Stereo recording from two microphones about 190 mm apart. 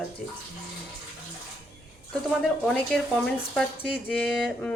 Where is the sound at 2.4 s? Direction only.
Centre (ahead or behind).